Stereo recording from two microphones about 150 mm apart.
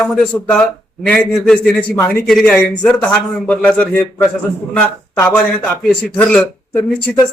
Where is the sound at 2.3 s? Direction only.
Centre (ahead or behind).